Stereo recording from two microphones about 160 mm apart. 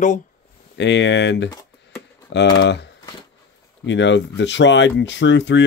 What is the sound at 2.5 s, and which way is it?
Speech, 90° left.